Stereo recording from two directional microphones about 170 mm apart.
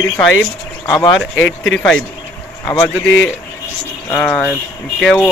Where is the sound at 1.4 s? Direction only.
90° left.